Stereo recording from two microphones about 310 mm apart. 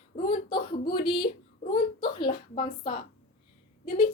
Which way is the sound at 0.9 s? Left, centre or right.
Centre.